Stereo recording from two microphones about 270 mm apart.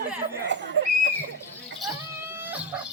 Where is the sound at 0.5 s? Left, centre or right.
Right.